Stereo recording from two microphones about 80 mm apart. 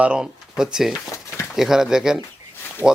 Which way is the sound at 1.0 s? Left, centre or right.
Left.